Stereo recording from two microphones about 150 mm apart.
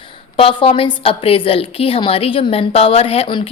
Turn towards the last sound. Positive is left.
turn(degrees=35)  # may be behind; listen again after turning